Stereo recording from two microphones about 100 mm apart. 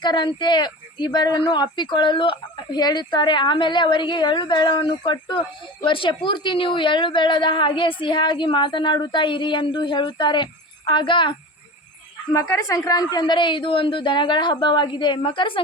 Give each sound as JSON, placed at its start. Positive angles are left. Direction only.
{"t": 0.0, "sound": "speech", "side_deg": 50}
{"t": 12.3, "sound": "speech", "side_deg": 30}